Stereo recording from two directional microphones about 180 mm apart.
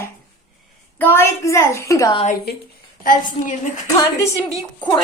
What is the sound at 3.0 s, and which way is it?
Speech, 45° left (ahead or behind).